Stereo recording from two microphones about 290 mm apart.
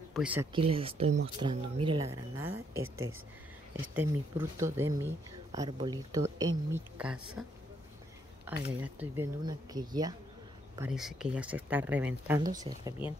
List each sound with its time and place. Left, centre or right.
0.1 s speech: centre
0.5 s speech: centre
3.9 s speech: centre
8.6 s speech: centre
10.8 s speech: centre